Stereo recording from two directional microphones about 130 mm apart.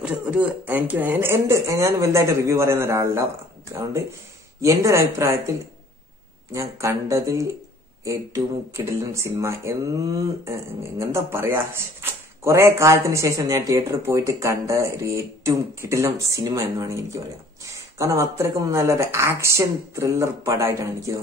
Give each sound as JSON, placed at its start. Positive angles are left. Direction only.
{"t": 0.0, "sound": "speech", "side_deg": -10}
{"t": 4.6, "sound": "speech", "side_deg": -25}